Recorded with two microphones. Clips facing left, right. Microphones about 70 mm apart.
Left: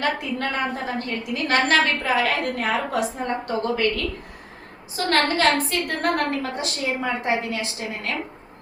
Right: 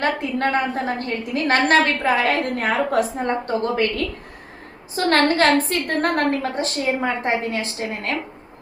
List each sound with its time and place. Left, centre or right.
0.0 s a woman's voice: right